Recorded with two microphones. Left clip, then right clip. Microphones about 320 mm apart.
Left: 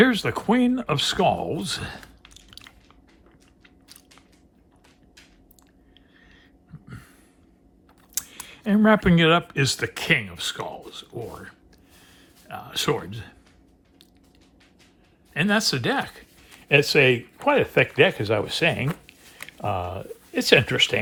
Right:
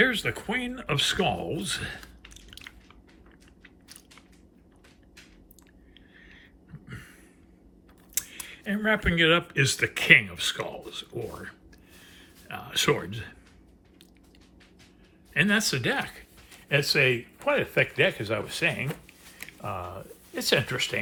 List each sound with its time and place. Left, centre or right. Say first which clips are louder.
0.0 s speech: left 4 dB; centre
6.1 s a sound: right 3 dB; centre
8.1 s speech: left 1 dB; centre
15.3 s speech: left 2 dB; centre